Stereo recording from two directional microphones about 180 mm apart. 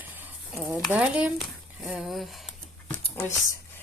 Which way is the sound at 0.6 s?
10° right (ahead or behind).